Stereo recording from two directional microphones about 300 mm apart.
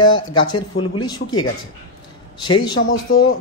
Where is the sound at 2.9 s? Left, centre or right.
Left.